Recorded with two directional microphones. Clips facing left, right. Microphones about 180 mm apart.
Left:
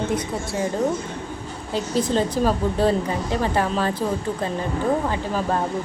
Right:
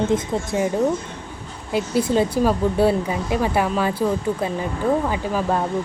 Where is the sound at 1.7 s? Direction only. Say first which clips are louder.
Right 2 dB; 10° right (ahead or behind).